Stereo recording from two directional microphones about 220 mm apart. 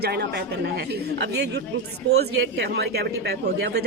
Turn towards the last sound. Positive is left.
turn(degrees=-50)  # may be behind; listen again after turning